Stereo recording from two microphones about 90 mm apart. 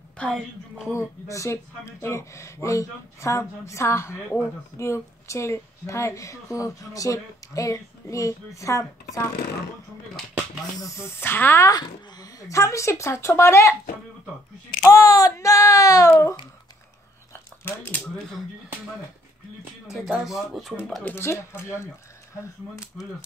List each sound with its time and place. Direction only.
0.9 s speech: 35° left (ahead or behind)
10.8 s speech: 35° left (ahead or behind)
11.6 s speech: 45° left (ahead or behind)
14.9 s speech: 40° left (ahead or behind)
17.3 s biting: 25° left (ahead or behind)
19.9 s speech: 5° right (ahead or behind)
21.0 s speech: 25° left (ahead or behind)